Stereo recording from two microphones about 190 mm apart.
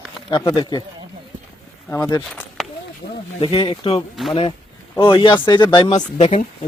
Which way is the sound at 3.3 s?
30° left (ahead or behind).